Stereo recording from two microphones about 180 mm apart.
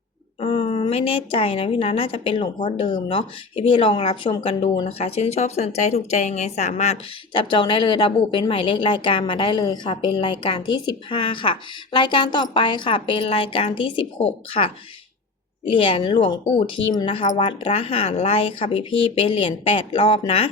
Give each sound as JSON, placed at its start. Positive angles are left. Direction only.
{"t": 0.3, "sound": "a woman's voice", "side_deg": 30}